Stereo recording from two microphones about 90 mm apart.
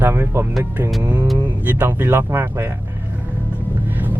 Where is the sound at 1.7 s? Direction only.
25° right (ahead or behind).